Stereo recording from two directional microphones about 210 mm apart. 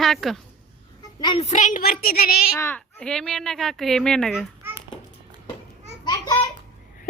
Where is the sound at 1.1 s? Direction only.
25° left (ahead or behind); by 2.3 s 45° left (ahead or behind).